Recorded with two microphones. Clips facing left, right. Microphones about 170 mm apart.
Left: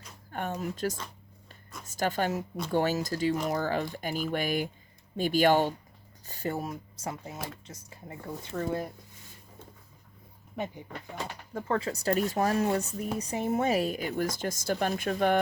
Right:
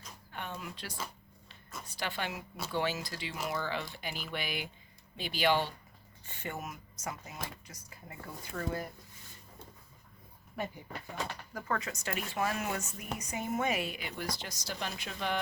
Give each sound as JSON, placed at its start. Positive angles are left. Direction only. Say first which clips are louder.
{"t": 0.3, "sound": "a sound", "louder": "left 9 dB", "side_deg": 45}
{"t": 1.9, "sound": "speech", "louder": "left 9 dB", "side_deg": 45}
{"t": 10.5, "sound": "speech", "louder": "left 3 dB", "side_deg": 15}